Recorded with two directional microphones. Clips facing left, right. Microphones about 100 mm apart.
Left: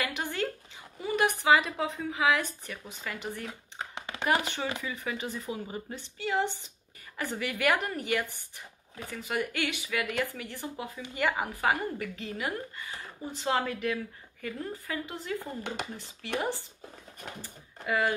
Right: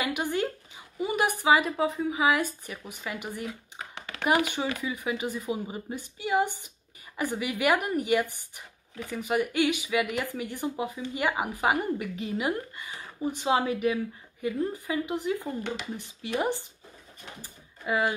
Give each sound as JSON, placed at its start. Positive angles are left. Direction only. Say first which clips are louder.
{"t": 0.0, "sound": "a sound", "louder": "right 4 dB", "side_deg": -15}
{"t": 0.9, "sound": "a woman's voice", "louder": "right 1 dB", "side_deg": -15}
{"t": 3.4, "sound": "a sound", "louder": "right 2 dB", "side_deg": 25}
{"t": 4.3, "sound": "a woman's voice", "louder": "right 3 dB", "side_deg": -15}
{"t": 15.6, "sound": "speech", "louder": "right 2 dB", "side_deg": 45}
{"t": 16.3, "sound": "speech", "louder": "right 4 dB", "side_deg": -20}